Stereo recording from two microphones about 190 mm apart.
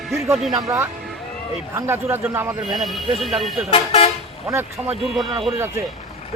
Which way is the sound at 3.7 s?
30° left (ahead or behind).